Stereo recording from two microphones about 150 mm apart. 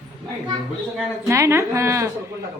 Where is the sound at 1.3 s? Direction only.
20° right (ahead or behind).